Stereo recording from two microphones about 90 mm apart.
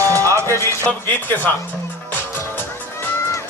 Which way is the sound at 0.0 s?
35° right (ahead or behind).